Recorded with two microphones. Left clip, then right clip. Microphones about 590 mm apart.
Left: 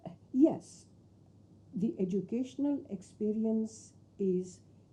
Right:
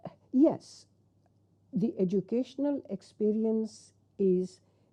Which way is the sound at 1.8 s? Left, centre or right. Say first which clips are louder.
Right 4 dB; right.